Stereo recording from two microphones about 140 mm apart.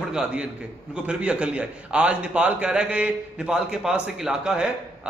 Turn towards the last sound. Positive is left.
turn(degrees=-5)  # may be behind; listen again after turning